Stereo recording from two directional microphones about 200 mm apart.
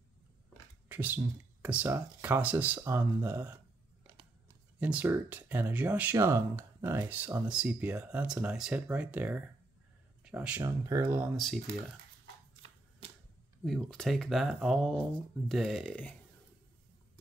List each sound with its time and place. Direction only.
0.8 s speech: 10° right (ahead or behind)
4.7 s speech: 5° right (ahead or behind)
10.6 s speech: 15° right (ahead or behind)
11.3 s speech: centre (ahead or behind)
13.7 s speech: centre (ahead or behind)